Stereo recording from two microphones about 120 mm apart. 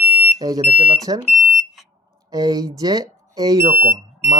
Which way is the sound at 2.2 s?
30° right (ahead or behind).